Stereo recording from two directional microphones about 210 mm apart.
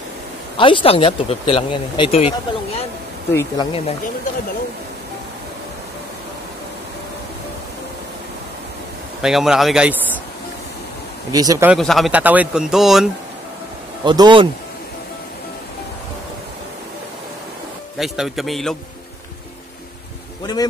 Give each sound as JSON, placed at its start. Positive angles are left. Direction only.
{"t": 0.6, "sound": "speech", "side_deg": 25}
{"t": 9.2, "sound": "speech", "side_deg": 0}
{"t": 11.3, "sound": "speech", "side_deg": -15}
{"t": 11.7, "sound": "speech", "side_deg": 0}
{"t": 14.0, "sound": "speech", "side_deg": -20}
{"t": 17.9, "sound": "speech", "side_deg": 0}
{"t": 20.5, "sound": "speech", "side_deg": 20}